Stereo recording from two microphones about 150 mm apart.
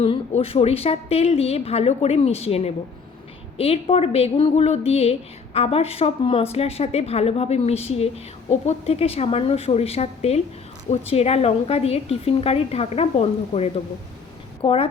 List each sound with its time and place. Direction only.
0.0 s a woman's voice: 40° left (ahead or behind)